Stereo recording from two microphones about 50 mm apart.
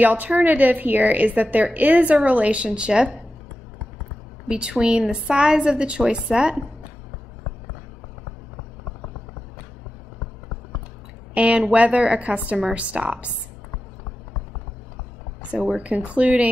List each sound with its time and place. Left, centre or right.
0.0 s a woman's voice: right; by 3.2 s centre
4.5 s a woman's voice: centre
11.3 s a woman's voice: right
15.7 s a woman's voice: right